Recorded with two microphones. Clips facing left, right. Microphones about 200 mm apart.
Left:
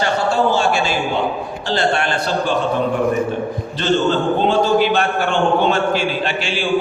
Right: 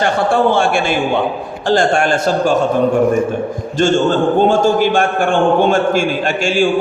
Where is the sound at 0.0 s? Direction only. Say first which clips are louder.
Right 3 dB; 55° right (ahead or behind).